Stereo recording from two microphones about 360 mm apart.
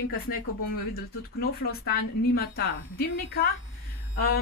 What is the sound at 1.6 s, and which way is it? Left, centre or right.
Speech, left.